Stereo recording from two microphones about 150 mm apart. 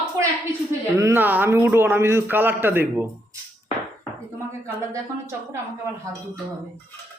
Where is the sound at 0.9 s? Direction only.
15° right (ahead or behind).